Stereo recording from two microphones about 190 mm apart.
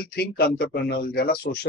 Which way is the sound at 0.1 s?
55° left (ahead or behind).